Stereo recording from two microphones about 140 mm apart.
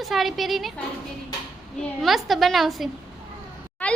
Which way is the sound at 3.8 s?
10° left (ahead or behind).